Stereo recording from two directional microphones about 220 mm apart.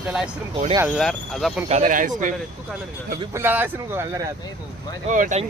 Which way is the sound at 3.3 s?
10° right (ahead or behind).